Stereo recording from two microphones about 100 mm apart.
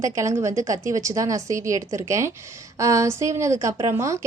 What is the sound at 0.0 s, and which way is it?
Speech, 30° right (ahead or behind).